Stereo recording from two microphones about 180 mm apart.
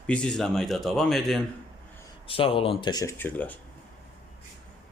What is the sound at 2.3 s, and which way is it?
Speech, 30° left (ahead or behind).